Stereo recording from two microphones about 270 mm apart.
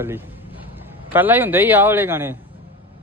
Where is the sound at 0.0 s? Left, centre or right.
Centre.